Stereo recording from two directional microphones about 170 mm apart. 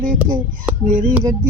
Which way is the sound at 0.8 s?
50° right (ahead or behind).